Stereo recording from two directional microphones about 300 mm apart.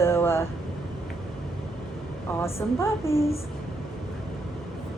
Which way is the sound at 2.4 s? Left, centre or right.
Centre.